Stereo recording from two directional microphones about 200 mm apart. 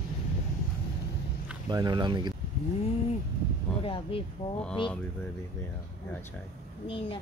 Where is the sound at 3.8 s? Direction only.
25° left (ahead or behind).